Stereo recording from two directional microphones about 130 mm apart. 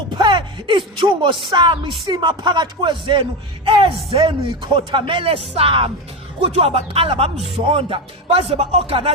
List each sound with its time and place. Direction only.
0.2 s speech: 35° right (ahead or behind); by 9.0 s 50° right (ahead or behind)